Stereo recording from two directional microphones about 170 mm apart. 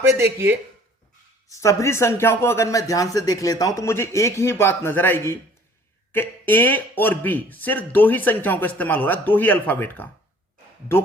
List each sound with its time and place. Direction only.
0.1 s speech: 15° right (ahead or behind)
1.5 s speech: 15° left (ahead or behind)